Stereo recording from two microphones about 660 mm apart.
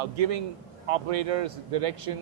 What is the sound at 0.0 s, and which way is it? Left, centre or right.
A man's voice, right.